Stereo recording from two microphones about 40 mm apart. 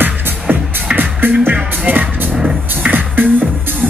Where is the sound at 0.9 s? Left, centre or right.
Right.